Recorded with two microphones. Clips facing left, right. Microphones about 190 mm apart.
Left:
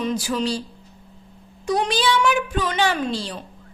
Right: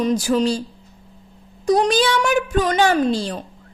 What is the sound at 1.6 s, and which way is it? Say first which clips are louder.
A woman's voice: right 5 dB; 40° right (ahead or behind).